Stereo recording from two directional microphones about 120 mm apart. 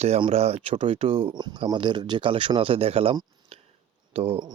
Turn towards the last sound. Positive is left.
turn(degrees=-50)  # may be behind; listen again after turning